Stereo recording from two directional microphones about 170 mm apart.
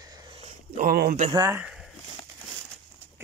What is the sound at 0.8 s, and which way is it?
Speech, 60° right (ahead or behind).